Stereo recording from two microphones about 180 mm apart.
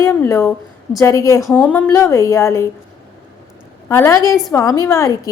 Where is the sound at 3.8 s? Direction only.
15° left (ahead or behind).